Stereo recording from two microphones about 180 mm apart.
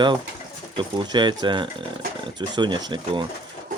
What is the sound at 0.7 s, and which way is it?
Speech, 25° right (ahead or behind).